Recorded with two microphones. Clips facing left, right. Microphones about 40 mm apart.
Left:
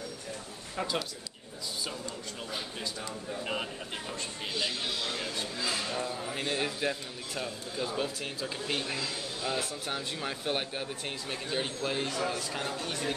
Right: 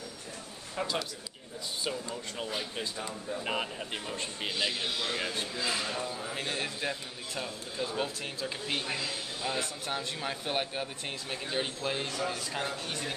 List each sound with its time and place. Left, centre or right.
0.7 s a man's voice: centre
1.9 s speech: centre
4.6 s speech: centre
5.6 s a man's voice: centre
12.1 s speech: centre
12.5 s a man's voice: centre